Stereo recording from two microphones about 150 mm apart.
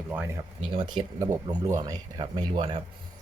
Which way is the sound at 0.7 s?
35° right (ahead or behind).